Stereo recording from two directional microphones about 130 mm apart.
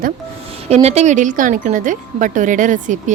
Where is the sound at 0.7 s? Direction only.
55° right (ahead or behind).